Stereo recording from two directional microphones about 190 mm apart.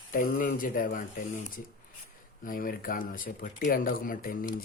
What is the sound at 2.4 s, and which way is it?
Speech, 45° left (ahead or behind).